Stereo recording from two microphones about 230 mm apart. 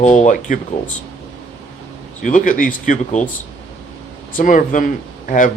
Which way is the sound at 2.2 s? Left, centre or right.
Left.